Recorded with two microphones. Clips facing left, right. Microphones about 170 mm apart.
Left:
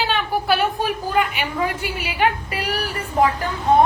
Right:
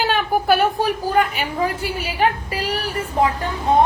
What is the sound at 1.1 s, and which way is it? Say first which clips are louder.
A woman's voice: right 2 dB; 40° right (ahead or behind).